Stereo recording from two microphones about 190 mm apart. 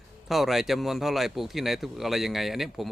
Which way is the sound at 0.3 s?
Centre (ahead or behind).